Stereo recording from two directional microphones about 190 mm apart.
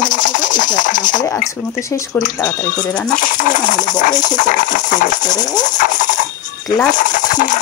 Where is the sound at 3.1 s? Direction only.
45° left (ahead or behind).